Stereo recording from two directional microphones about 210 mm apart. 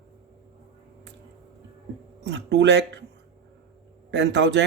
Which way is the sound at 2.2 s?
55° right (ahead or behind).